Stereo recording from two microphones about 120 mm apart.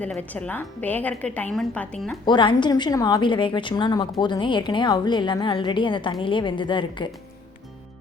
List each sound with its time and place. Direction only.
0.0 s a woman's voice: 10° left (ahead or behind)
2.2 s a woman's voice: 40° left (ahead or behind)